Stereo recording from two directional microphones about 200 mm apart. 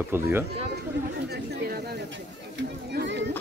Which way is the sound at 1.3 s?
55° right (ahead or behind).